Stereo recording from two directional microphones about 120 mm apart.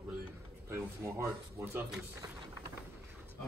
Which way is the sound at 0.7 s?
20° right (ahead or behind).